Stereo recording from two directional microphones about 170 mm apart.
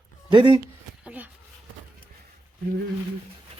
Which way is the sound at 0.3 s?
30° right (ahead or behind).